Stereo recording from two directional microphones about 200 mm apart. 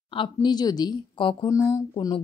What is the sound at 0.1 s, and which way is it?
A woman's voice, 25° left (ahead or behind).